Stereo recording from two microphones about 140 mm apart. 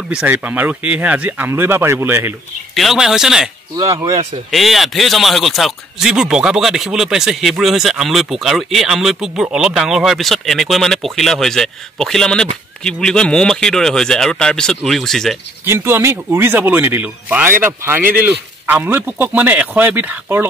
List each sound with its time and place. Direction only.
0.1 s speech: 10° right (ahead or behind)
2.7 s speech: centre (ahead or behind)
3.7 s speech: 25° right (ahead or behind)
4.1 s speech: 45° right (ahead or behind)
4.5 s speech: centre (ahead or behind)
15.6 s speech: 20° right (ahead or behind)